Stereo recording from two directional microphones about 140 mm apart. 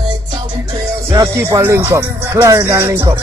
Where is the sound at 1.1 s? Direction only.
20° right (ahead or behind).